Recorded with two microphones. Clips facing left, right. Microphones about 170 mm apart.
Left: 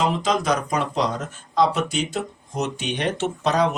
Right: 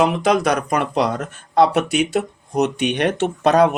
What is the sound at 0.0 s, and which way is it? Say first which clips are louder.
Speech: right 5 dB; 65° right (ahead or behind).